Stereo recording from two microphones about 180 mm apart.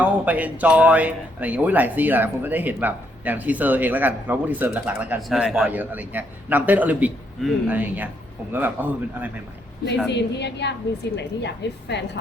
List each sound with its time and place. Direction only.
0.0 s speech: 10° right (ahead or behind)
10.1 s a woman's voice: 70° left (ahead or behind)